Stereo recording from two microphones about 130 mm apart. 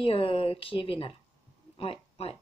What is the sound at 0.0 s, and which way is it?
Speech, 45° left (ahead or behind).